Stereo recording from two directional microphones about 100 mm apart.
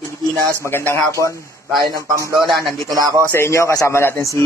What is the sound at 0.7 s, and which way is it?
Speech, 20° left (ahead or behind).